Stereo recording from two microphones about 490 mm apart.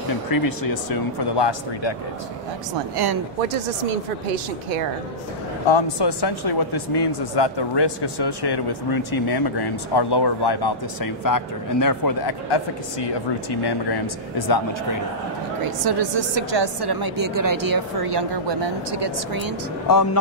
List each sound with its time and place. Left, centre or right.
0.3 s speech: left
5.7 s speech: left
14.5 s speech: left
15.8 s a woman's voice: right
19.9 s speech: left